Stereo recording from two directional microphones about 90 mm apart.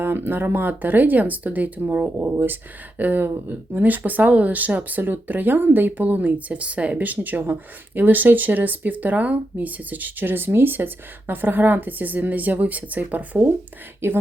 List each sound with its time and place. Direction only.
0.0 s speech: 25° right (ahead or behind)